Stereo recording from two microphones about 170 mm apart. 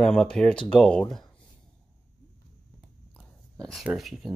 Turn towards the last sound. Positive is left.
turn(degrees=0)  # may be behind; listen again after turning